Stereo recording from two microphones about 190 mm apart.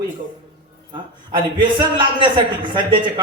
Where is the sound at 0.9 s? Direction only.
25° right (ahead or behind).